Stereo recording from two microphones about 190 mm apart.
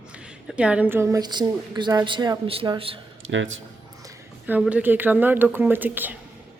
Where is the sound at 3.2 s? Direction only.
85° right.